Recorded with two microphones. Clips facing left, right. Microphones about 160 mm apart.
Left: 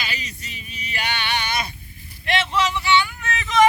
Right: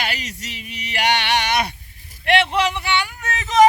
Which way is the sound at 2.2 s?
60° right (ahead or behind).